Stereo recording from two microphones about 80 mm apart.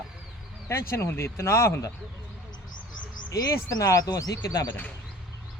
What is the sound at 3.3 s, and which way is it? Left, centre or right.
Speech, left.